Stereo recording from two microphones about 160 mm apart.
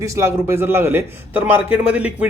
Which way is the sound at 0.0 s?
20° right (ahead or behind).